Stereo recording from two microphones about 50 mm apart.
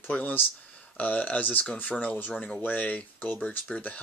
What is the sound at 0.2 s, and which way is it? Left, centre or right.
Speech, left.